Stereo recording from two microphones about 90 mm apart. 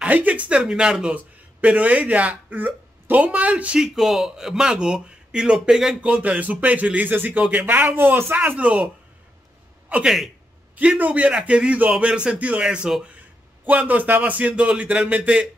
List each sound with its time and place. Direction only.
0.0 s a man's voice: 15° right (ahead or behind)
5.9 s a man's voice: 15° right (ahead or behind)
10.0 s a man's voice: centre (ahead or behind)
10.8 s a man's voice: 15° right (ahead or behind)